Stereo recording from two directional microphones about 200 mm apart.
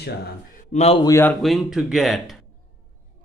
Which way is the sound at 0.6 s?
35° left (ahead or behind).